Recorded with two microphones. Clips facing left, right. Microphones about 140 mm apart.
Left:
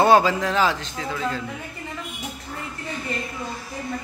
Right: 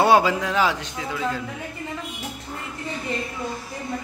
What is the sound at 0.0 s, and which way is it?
A man's voice, 10° right (ahead or behind).